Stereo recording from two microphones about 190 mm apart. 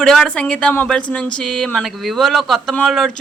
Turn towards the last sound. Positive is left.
turn(degrees=0)  # may be behind; listen again after turning